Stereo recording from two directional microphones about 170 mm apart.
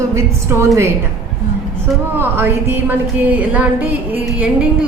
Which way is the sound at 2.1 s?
10° right (ahead or behind).